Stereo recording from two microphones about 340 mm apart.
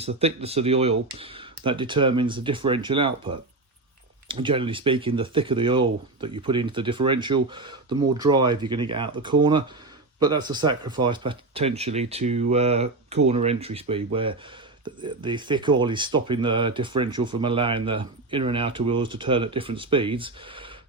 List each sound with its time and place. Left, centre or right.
0.0 s speech: centre